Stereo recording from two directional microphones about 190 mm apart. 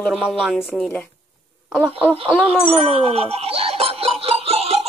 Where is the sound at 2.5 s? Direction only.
30° right (ahead or behind).